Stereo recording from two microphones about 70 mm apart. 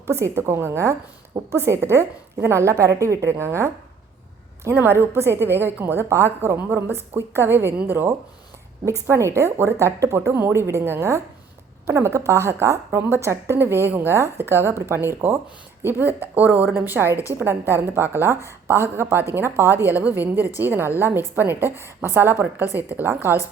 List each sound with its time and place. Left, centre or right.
0.1 s a woman's voice: right
8.8 s a woman's voice: right
23.0 s a woman's voice: right